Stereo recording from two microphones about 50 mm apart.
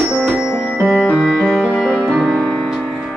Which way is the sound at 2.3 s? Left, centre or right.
Centre.